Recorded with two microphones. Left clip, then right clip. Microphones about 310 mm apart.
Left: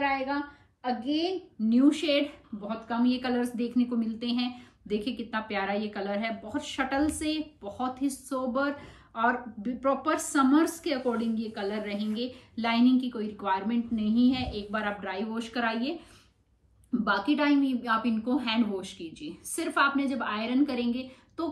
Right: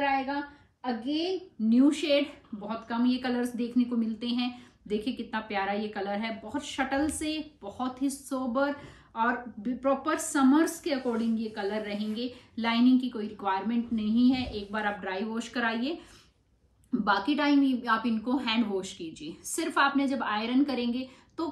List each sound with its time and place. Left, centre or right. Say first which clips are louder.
0.0 s a woman's voice: even; centre
17.0 s a woman's voice: even; centre